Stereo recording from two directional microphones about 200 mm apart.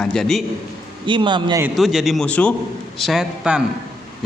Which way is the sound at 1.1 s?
25° right (ahead or behind).